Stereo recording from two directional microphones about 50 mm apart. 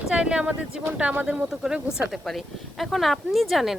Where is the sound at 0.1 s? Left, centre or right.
Centre.